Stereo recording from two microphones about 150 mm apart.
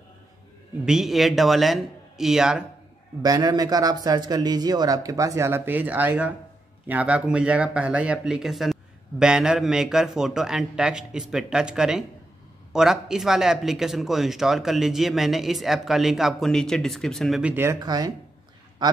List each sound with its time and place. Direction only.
0.8 s speech: centre (ahead or behind)
3.2 s speech: 25° right (ahead or behind); by 17.6 s 5° right (ahead or behind)
17.6 s speech: 25° right (ahead or behind)